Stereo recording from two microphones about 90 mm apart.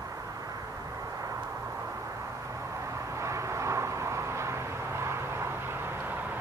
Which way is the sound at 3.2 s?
35° right (ahead or behind).